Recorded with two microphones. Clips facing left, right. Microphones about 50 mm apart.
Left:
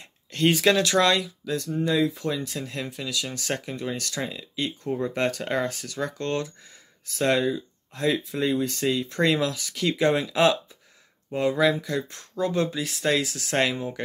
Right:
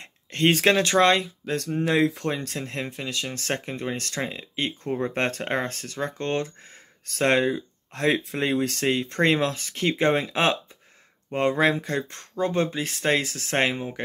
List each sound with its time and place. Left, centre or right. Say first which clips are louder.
0.0 s a sound: right 1 dB; right
0.7 s speech: right 2 dB; right
1.5 s speech: right 1 dB; right
7.1 s speech: right 1 dB; right